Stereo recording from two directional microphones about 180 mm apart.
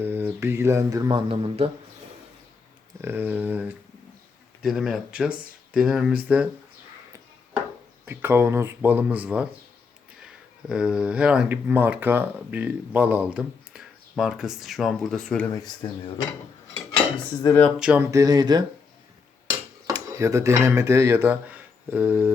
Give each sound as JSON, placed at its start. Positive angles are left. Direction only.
{"t": 0.0, "sound": "speech", "side_deg": -10}
{"t": 1.3, "sound": "speech", "side_deg": -30}
{"t": 3.0, "sound": "speech", "side_deg": -10}
{"t": 8.0, "sound": "speech", "side_deg": -10}
{"t": 15.5, "sound": "speech", "side_deg": 20}
{"t": 17.4, "sound": "speech", "side_deg": 15}
{"t": 17.7, "sound": "speech", "side_deg": -5}
{"t": 18.1, "sound": "speech", "side_deg": -20}
{"t": 20.1, "sound": "speech", "side_deg": -15}